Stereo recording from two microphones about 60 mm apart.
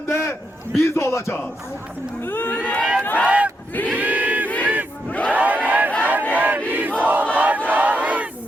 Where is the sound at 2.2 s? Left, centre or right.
Left.